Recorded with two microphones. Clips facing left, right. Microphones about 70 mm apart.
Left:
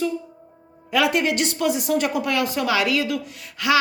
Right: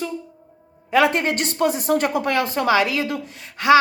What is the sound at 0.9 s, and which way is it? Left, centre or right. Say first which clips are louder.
Speech: right 2 dB; right.